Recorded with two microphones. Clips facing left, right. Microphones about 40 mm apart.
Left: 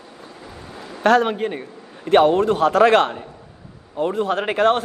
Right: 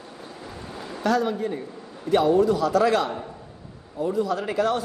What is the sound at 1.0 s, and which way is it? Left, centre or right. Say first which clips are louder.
A man's voice: left 7 dB; left.